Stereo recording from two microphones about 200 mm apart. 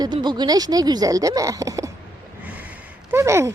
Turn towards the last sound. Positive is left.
turn(degrees=-15)  # may be behind; listen again after turning